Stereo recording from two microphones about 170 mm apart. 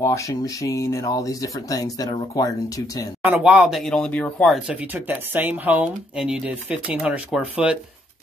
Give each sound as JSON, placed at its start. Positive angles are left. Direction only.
{"t": 0.0, "sound": "speech", "side_deg": 20}
{"t": 3.2, "sound": "speech", "side_deg": -5}
{"t": 4.6, "sound": "speech", "side_deg": -10}